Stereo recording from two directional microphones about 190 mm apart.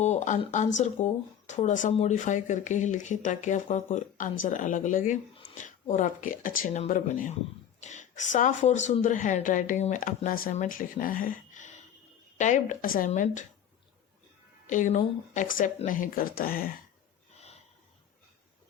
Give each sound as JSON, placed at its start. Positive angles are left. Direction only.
{"t": 0.0, "sound": "speech", "side_deg": 40}
{"t": 14.7, "sound": "speech", "side_deg": 40}